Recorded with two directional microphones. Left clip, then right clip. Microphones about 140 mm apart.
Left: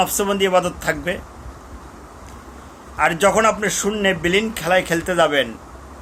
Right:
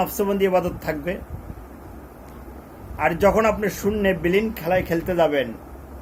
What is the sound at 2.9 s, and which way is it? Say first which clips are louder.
A man's voice: left 2 dB; 20° left (ahead or behind).